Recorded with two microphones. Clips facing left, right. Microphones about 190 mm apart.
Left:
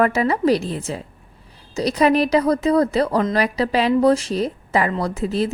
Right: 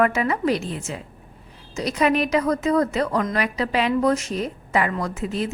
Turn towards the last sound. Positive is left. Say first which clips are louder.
# left 4 dB
turn(degrees=35)  # may be behind; listen again after turning